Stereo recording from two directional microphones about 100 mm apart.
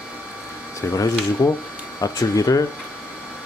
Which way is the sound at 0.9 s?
35° left (ahead or behind).